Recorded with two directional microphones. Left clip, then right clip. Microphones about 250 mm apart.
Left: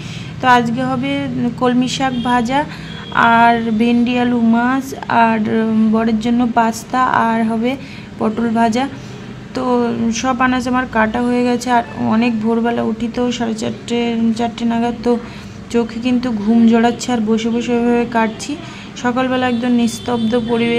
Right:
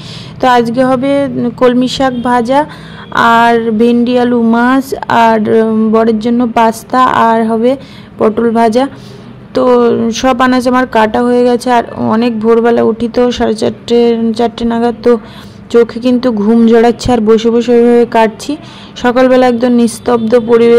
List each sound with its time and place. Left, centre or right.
0.4 s speech: centre